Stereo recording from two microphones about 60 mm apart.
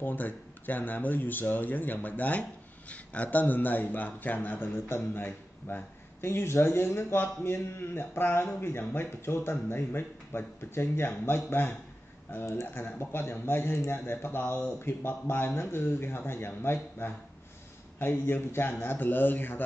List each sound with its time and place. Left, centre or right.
0.0 s speech: left